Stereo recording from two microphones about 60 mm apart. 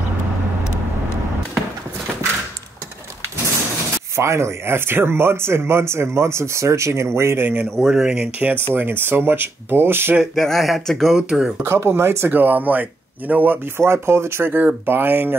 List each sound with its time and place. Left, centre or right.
4.2 s speech: right
7.8 s speech: centre
8.4 s speech: right
10.3 s speech: centre
11.6 s speech: right
12.3 s speech: right
13.7 s speech: right